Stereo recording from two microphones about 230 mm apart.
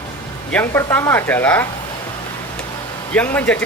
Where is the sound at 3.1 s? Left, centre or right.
Centre.